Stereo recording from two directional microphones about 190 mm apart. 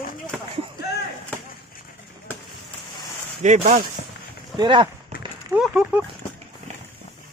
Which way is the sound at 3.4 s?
40° right (ahead or behind).